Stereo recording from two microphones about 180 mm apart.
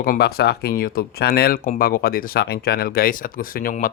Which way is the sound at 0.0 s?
55° left (ahead or behind).